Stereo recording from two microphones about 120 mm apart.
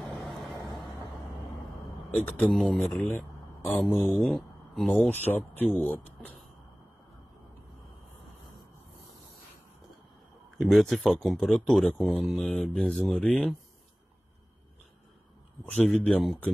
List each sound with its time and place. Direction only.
0.2 s vehicle: centre (ahead or behind)
2.1 s speech: 10° left (ahead or behind)
4.3 s a sound: centre (ahead or behind)
4.9 s speech: 15° left (ahead or behind)
10.6 s speech: centre (ahead or behind)
15.6 s speech: 10° left (ahead or behind)